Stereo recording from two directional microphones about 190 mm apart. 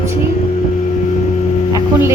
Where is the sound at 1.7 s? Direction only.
15° right (ahead or behind).